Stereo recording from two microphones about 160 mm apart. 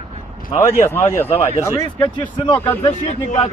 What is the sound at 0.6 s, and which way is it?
Speech, 15° left (ahead or behind).